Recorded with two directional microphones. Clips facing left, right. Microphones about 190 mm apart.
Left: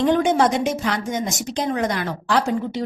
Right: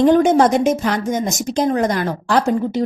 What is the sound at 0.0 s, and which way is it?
A woman's voice, 45° right (ahead or behind).